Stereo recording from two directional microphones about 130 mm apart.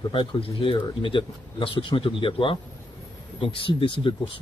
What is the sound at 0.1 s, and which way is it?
Speech, 40° left (ahead or behind).